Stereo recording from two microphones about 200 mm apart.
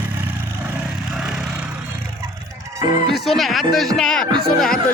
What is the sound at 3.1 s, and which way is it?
Speech, centre (ahead or behind).